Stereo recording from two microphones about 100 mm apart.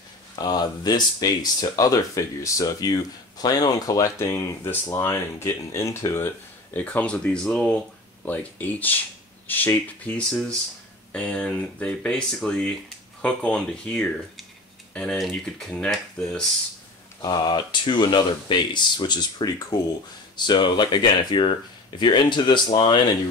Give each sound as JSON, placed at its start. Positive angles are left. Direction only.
{"t": 0.4, "sound": "speech", "side_deg": 45}
{"t": 6.7, "sound": "speech", "side_deg": 15}
{"t": 17.2, "sound": "speech", "side_deg": 45}